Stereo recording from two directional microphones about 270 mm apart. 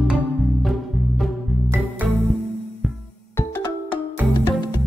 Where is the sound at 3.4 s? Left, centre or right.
Centre.